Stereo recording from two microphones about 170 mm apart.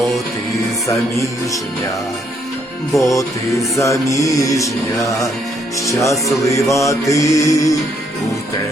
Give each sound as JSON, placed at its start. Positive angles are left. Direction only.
{"t": 3.0, "sound": "music", "side_deg": 20}